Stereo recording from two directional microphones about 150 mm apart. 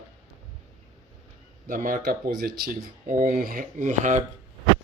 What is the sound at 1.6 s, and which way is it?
Speech, 65° right (ahead or behind).